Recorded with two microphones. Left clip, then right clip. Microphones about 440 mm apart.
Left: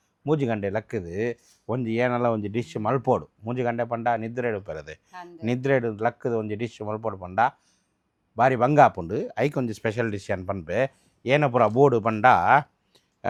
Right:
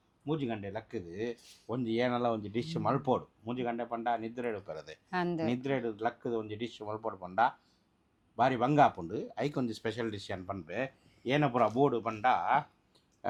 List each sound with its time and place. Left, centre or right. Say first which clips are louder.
0.3 s speech: left 11 dB; left
5.1 s speech: right 9 dB; right
5.5 s speech: left 10 dB; left